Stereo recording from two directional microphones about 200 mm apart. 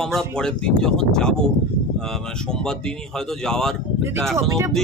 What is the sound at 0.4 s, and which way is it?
Speech, 5° left (ahead or behind).